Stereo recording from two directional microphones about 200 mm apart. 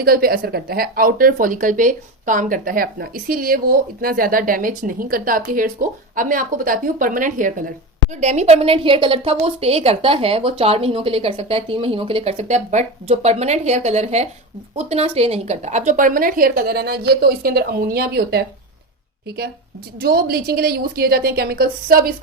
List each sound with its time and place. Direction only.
0.0 s a woman's voice: 50° right (ahead or behind)
20.0 s speech: 50° right (ahead or behind)